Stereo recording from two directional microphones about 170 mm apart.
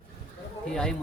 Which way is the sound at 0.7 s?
5° left (ahead or behind).